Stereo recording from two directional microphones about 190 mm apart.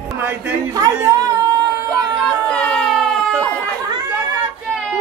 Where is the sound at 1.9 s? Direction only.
5° left (ahead or behind).